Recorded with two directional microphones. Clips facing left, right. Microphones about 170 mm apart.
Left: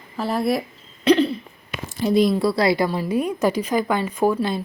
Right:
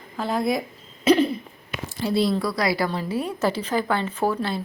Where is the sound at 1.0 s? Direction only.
10° right (ahead or behind).